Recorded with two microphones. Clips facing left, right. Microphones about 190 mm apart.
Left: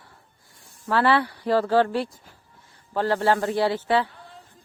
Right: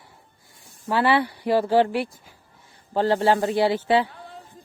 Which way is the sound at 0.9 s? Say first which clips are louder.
Even; 15° right (ahead or behind).